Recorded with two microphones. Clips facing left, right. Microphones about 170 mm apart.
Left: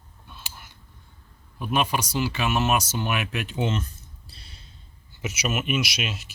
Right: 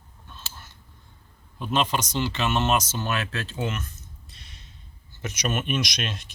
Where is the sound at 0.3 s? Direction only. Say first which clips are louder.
Even; 10° left (ahead or behind).